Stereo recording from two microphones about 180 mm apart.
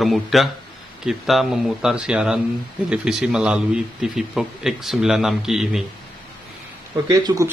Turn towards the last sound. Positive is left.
turn(degrees=-20)  # may be behind; listen again after turning